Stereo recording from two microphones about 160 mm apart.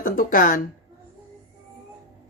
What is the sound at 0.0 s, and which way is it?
Speech, 60° left (ahead or behind).